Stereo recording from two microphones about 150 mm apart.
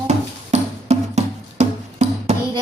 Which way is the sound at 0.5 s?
45° right (ahead or behind).